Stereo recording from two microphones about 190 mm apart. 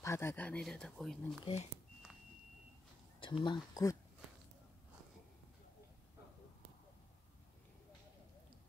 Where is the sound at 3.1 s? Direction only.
25° left (ahead or behind).